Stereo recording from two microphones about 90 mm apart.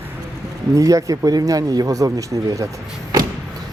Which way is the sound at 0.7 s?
40° right (ahead or behind).